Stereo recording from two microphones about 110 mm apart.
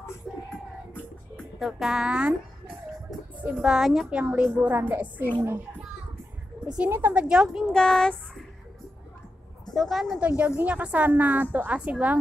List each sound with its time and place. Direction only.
1.6 s music: centre (ahead or behind)
3.5 s music: centre (ahead or behind)
4.2 s a woman's voice: 15° right (ahead or behind)
6.8 s a woman's voice: 20° right (ahead or behind)
7.7 s child singing: 5° left (ahead or behind)
9.8 s music: centre (ahead or behind)
10.6 s a woman's voice: 10° right (ahead or behind)